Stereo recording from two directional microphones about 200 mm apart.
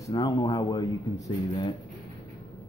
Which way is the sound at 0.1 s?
20° left (ahead or behind).